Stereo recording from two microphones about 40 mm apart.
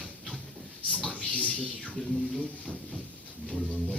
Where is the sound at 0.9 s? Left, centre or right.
Left.